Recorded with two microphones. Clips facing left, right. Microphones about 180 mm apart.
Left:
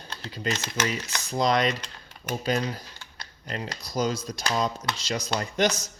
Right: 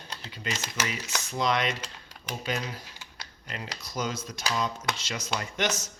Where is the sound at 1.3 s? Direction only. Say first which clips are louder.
Left 4 dB; 40° left (ahead or behind).